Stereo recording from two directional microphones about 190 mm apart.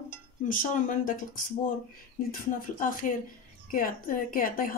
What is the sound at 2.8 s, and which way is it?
Speech, 45° left (ahead or behind).